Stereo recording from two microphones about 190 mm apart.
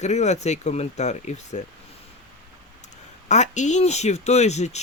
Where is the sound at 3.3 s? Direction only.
40° left (ahead or behind).